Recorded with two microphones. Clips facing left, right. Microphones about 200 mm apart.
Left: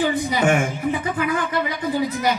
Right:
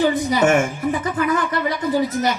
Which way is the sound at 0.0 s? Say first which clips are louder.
Right 3 dB; 40° right (ahead or behind).